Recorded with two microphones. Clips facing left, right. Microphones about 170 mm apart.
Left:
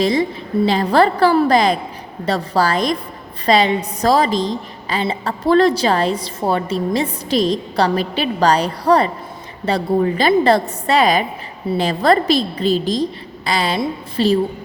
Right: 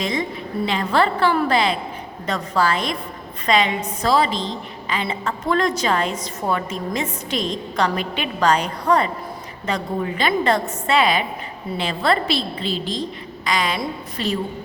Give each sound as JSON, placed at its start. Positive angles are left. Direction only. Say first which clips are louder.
{"t": 0.0, "sound": "a woman's voice", "louder": "left 7 dB", "side_deg": 35}